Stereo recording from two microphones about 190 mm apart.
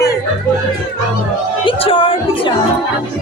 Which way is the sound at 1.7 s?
30° left (ahead or behind).